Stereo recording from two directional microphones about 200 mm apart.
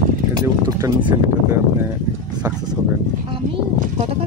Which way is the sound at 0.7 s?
20° right (ahead or behind).